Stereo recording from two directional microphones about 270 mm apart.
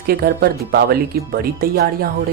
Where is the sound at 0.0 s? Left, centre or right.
Right.